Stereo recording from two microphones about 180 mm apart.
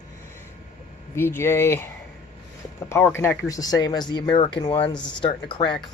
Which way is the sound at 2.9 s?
10° left (ahead or behind).